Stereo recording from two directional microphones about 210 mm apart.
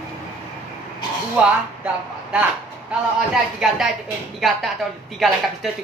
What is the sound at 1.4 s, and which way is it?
Speech, 5° right (ahead or behind).